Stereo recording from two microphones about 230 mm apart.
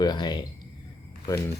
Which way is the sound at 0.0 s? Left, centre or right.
Centre.